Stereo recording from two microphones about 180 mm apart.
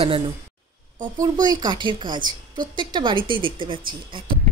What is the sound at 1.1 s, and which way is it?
A woman's voice, 20° right (ahead or behind).